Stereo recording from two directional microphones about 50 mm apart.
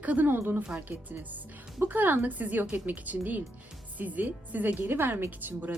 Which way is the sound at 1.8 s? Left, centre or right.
Right.